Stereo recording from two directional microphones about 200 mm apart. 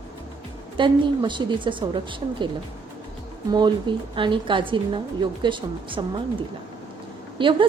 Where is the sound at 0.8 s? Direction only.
25° right (ahead or behind).